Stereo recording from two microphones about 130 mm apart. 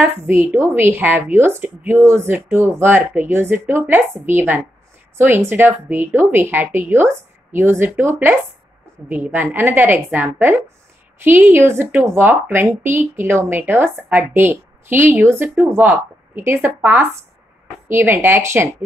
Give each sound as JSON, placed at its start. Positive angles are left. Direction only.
{"t": 0.0, "sound": "a woman's voice", "side_deg": -15}